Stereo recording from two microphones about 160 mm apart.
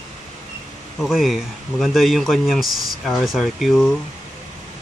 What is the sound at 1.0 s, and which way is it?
Speech, centre (ahead or behind).